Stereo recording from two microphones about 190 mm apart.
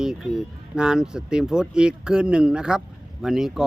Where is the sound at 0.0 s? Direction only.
Centre (ahead or behind).